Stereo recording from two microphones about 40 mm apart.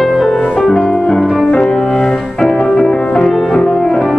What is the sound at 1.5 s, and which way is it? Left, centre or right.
Music, left.